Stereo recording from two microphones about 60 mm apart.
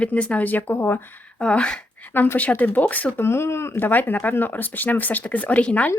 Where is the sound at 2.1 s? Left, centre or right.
Left.